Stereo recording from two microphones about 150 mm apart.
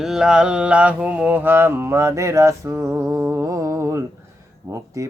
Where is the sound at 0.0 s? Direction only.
5° right (ahead or behind).